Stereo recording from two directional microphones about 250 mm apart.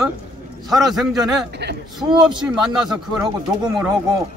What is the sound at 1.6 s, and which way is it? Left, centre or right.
Speech, right.